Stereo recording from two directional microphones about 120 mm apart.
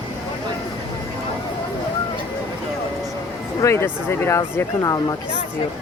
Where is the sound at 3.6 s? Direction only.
20° left (ahead or behind).